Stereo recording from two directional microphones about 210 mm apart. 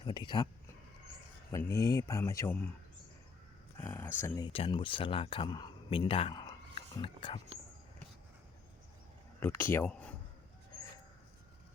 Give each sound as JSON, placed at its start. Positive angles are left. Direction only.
{"t": 0.0, "sound": "speech", "side_deg": 20}
{"t": 1.5, "sound": "speech", "side_deg": 15}
{"t": 3.8, "sound": "speech", "side_deg": 10}
{"t": 4.4, "sound": "speech", "side_deg": 25}
{"t": 9.4, "sound": "speech", "side_deg": 10}